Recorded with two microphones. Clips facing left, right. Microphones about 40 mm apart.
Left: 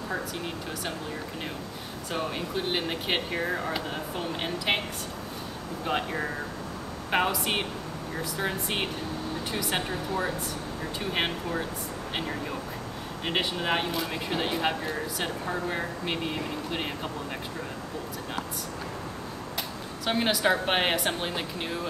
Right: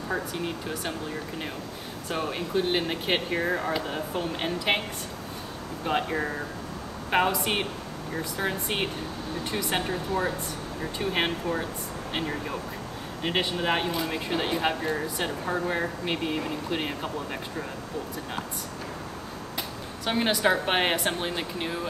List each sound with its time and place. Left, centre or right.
0.1 s speech: centre
2.0 s speech: centre
5.9 s speech: centre
20.1 s speech: centre